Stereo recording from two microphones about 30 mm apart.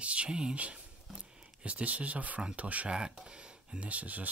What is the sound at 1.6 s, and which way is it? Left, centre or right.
Speech, right.